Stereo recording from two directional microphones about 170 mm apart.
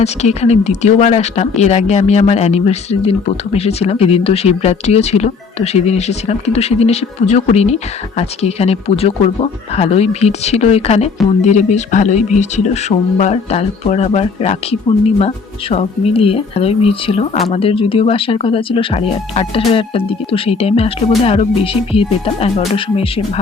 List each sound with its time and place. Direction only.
0.0 s speech: 40° left (ahead or behind)